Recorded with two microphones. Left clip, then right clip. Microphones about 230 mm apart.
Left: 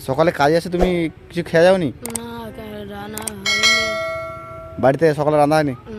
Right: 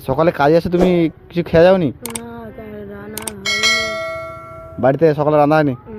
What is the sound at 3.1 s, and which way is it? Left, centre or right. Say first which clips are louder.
Church bell: even; centre.